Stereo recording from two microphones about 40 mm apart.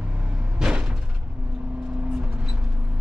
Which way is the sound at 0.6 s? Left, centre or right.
Right.